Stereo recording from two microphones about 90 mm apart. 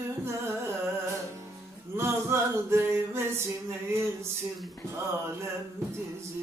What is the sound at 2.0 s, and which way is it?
Music, 30° right (ahead or behind).